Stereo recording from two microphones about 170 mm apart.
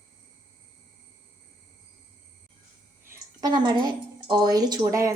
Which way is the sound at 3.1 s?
25° right (ahead or behind).